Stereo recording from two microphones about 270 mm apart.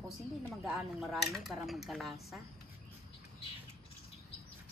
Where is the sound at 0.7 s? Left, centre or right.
Centre.